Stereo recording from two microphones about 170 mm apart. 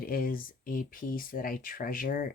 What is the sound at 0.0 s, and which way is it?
Speech, 60° left (ahead or behind).